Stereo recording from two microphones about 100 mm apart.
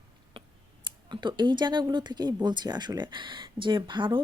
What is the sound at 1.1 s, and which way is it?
Speech, 50° right (ahead or behind).